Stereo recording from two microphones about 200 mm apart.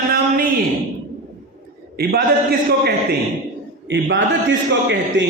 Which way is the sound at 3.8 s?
65° right (ahead or behind).